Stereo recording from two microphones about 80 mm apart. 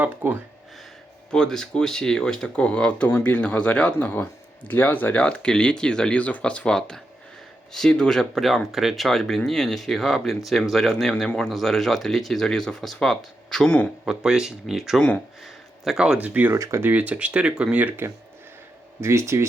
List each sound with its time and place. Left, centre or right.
0.0 s speech: right
1.3 s speech: centre
14.0 s speech: centre
16.1 s speech: centre
16.5 s speech: right
16.9 s speech: centre
19.0 s speech: right